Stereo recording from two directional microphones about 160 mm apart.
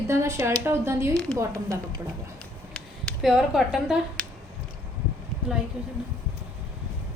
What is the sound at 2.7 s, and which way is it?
Speech, 5° left (ahead or behind).